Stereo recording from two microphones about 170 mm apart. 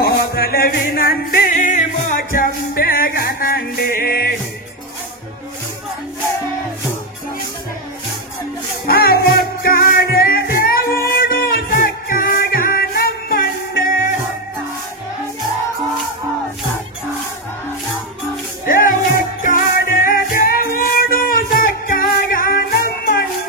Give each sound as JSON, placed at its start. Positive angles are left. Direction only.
{"t": 0.0, "sound": "music", "side_deg": 60}
{"t": 8.8, "sound": "music", "side_deg": 65}
{"t": 18.7, "sound": "music", "side_deg": 50}